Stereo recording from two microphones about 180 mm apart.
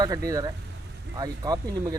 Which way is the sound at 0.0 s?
20° right (ahead or behind).